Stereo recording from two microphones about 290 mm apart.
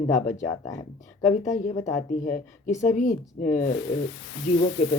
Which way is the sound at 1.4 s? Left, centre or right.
Left.